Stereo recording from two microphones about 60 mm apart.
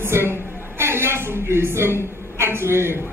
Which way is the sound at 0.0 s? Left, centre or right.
Right.